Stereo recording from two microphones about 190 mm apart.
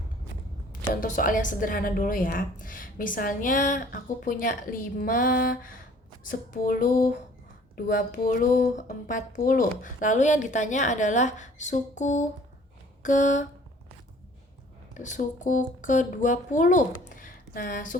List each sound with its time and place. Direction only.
1.0 s a woman's voice: 45° left (ahead or behind)
14.9 s a woman's voice: 40° left (ahead or behind)